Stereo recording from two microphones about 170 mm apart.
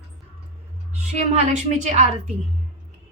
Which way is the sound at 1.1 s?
40° right (ahead or behind).